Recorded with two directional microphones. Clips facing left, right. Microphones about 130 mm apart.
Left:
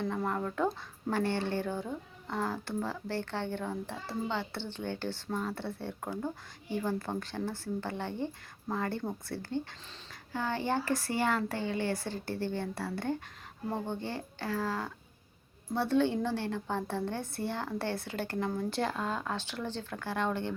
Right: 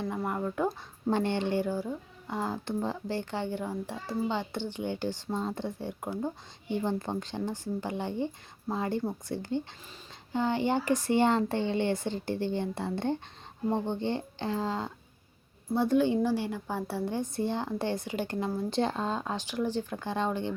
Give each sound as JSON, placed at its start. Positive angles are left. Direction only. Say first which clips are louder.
{"t": 0.2, "sound": "speech", "louder": "right 3 dB", "side_deg": -10}